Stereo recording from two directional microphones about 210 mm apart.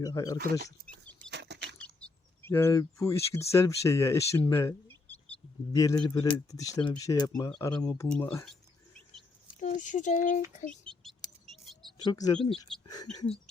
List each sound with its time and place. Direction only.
0.0 s speech: 15° left (ahead or behind)
1.3 s bird flight: 55° right (ahead or behind)
2.0 s speech: 10° left (ahead or behind)
9.6 s speech: 35° left (ahead or behind)
10.7 s speech: 5° left (ahead or behind)
11.4 s a sound: centre (ahead or behind)
12.0 s speech: 15° left (ahead or behind)
12.4 s speech: centre (ahead or behind)